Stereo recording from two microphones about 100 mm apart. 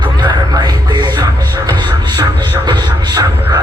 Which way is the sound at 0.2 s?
45° right (ahead or behind).